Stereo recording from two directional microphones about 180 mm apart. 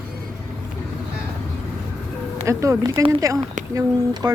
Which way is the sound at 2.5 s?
15° right (ahead or behind).